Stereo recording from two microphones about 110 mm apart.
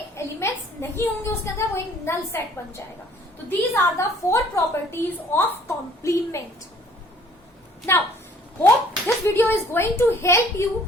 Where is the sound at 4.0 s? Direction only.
25° left (ahead or behind).